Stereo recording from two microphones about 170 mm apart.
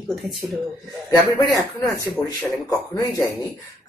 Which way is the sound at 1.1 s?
20° left (ahead or behind).